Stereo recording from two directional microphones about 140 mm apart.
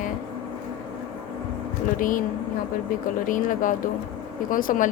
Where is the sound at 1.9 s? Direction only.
75° left (ahead or behind).